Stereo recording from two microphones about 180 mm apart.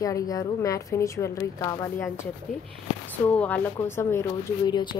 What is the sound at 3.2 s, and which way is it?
A woman's voice, 10° left (ahead or behind).